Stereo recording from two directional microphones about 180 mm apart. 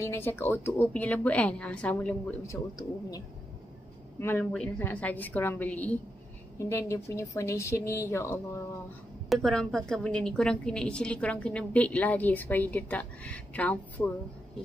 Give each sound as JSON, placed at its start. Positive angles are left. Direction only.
{"t": 0.0, "sound": "a woman's voice", "side_deg": 10}
{"t": 4.2, "sound": "a woman's voice", "side_deg": 10}
{"t": 9.3, "sound": "a woman's voice", "side_deg": 5}